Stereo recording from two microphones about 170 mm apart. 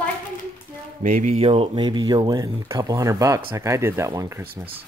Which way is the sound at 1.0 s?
45° right (ahead or behind).